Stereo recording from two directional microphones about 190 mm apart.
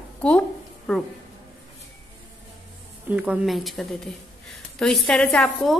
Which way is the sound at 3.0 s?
5° right (ahead or behind).